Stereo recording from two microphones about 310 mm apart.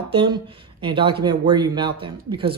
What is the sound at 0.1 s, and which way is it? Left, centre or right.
Speech, centre.